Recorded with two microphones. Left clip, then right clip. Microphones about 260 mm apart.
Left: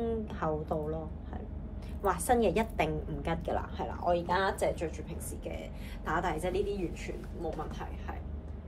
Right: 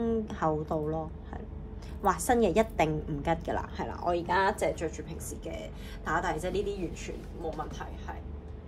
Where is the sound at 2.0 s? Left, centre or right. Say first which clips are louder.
Right 2 dB; right.